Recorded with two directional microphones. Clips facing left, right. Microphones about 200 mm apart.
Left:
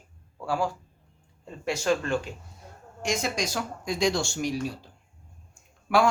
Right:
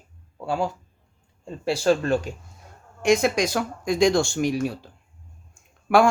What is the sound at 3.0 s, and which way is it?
Speech, 60° right (ahead or behind).